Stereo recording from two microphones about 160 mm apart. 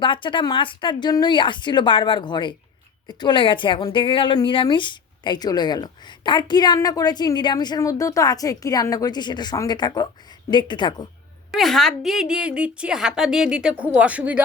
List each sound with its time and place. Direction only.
0.0 s a woman's voice: 30° left (ahead or behind)
11.5 s a woman's voice: centre (ahead or behind)